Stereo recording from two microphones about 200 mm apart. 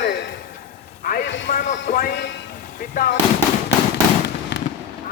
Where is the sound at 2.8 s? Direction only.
45° left (ahead or behind).